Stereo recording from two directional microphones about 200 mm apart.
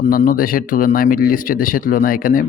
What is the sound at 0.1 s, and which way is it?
Speech, 45° left (ahead or behind).